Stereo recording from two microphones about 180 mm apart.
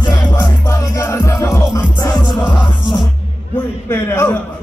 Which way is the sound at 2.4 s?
Centre (ahead or behind).